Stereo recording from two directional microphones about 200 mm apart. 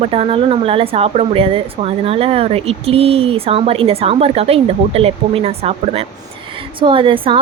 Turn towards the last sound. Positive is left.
turn(degrees=-25)  # may be behind; listen again after turning